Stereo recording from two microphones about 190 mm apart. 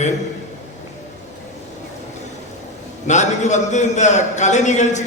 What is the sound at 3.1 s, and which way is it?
A man's voice, 40° left (ahead or behind).